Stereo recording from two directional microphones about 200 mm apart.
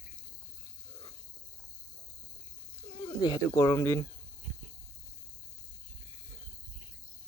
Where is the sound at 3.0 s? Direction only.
20° left (ahead or behind).